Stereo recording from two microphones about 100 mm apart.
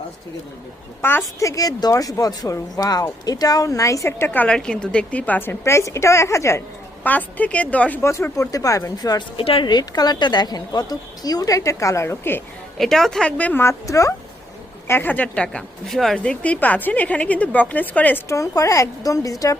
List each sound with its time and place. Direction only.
1.0 s a woman's voice: 25° left (ahead or behind)
1.4 s speech: 35° left (ahead or behind)
4.3 s a woman's voice: 10° left (ahead or behind); by 6.6 s 30° left (ahead or behind)
7.0 s a woman's voice: 15° left (ahead or behind)
8.0 s speech: 30° left (ahead or behind)
9.4 s a woman's voice: 65° left (ahead or behind)
9.6 s speech: 45° left (ahead or behind); by 12.4 s 25° left (ahead or behind)
12.7 s a woman's voice: 5° left (ahead or behind); by 14.1 s 35° left (ahead or behind)
14.8 s a woman's voice: 20° left (ahead or behind)
15.9 s a woman's voice: centre (ahead or behind)
18.3 s speech: 30° left (ahead or behind)